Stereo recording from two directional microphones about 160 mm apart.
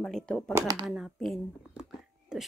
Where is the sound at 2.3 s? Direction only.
5° right (ahead or behind).